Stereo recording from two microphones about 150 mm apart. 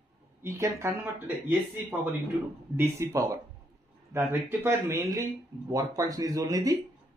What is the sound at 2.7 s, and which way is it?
Speech, 15° right (ahead or behind).